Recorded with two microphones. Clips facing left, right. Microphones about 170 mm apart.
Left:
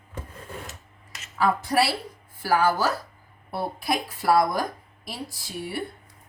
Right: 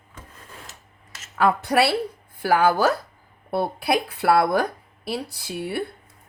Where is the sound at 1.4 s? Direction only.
65° right (ahead or behind).